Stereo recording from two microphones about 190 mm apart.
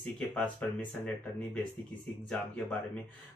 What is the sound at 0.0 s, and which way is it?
Speech, 5° left (ahead or behind).